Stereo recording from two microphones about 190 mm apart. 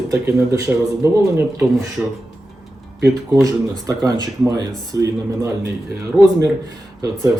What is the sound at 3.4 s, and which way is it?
Speech, 15° right (ahead or behind).